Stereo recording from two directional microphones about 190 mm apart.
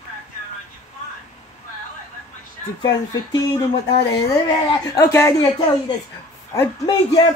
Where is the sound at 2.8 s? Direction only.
20° left (ahead or behind).